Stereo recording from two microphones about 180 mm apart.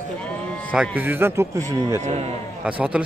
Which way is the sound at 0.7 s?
5° right (ahead or behind).